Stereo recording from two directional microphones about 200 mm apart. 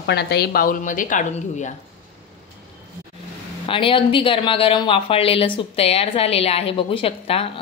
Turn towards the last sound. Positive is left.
turn(degrees=30)  # may be behind; listen again after turning